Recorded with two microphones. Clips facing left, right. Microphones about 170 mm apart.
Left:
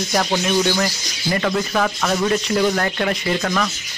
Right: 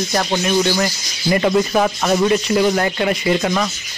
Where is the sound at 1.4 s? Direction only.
20° right (ahead or behind).